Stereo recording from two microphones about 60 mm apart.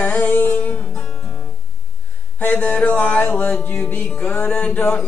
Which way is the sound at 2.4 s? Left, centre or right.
Left.